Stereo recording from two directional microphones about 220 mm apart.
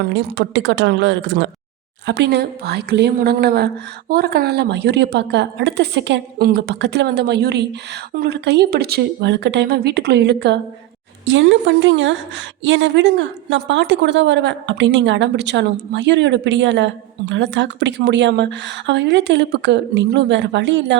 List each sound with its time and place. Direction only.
0.0 s a woman's voice: 50° right (ahead or behind)